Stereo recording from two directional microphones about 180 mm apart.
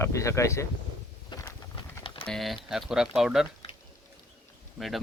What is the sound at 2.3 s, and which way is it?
Speech, centre (ahead or behind).